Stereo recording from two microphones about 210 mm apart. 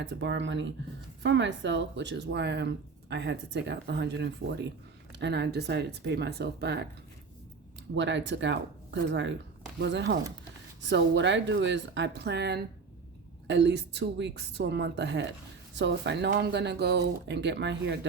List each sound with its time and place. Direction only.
0.0 s speech: 60° right (ahead or behind)
7.9 s speech: 60° right (ahead or behind)